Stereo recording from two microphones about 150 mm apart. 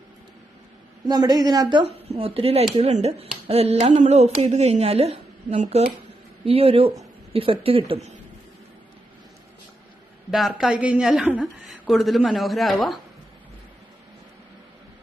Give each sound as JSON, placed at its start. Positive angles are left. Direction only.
{"t": 1.0, "sound": "a woman's voice", "side_deg": -30}
{"t": 10.3, "sound": "a woman's voice", "side_deg": -5}